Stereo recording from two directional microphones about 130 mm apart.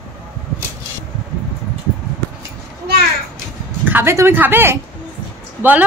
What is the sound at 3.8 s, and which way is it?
Speech, 15° right (ahead or behind).